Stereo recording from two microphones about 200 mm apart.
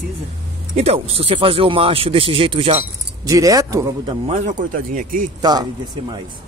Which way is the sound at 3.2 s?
15° right (ahead or behind).